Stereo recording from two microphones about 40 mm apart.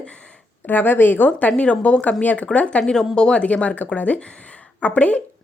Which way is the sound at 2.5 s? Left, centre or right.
Left.